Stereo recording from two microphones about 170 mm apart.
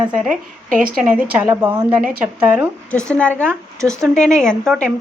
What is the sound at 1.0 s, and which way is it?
Speech, 10° right (ahead or behind).